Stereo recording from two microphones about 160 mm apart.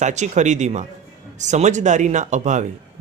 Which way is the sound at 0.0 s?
45° right (ahead or behind).